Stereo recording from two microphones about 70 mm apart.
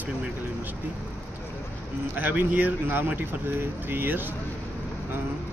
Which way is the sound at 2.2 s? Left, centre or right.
Right.